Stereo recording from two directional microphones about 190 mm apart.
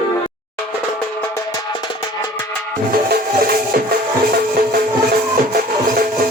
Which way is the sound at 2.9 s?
50° right (ahead or behind).